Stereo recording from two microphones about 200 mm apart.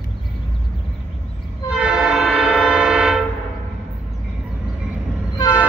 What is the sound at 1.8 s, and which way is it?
Train, 5° right (ahead or behind).